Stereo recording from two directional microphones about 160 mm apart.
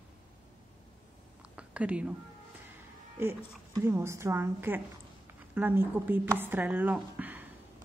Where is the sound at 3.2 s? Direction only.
15° right (ahead or behind).